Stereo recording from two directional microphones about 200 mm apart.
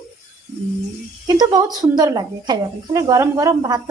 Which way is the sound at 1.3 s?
20° right (ahead or behind).